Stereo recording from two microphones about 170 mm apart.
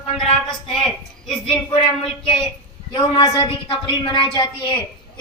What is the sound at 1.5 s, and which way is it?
A woman's voice, 30° left (ahead or behind).